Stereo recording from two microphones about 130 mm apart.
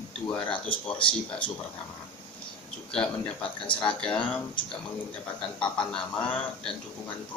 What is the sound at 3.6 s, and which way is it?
Speech, 40° left (ahead or behind).